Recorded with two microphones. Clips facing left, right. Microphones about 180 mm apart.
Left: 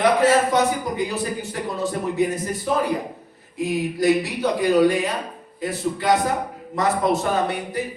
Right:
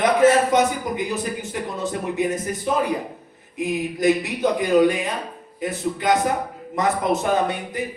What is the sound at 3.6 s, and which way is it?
Speech, 20° right (ahead or behind).